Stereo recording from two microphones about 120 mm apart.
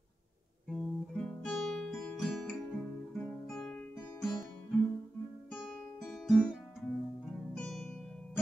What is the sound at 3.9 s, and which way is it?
Music, 20° left (ahead or behind).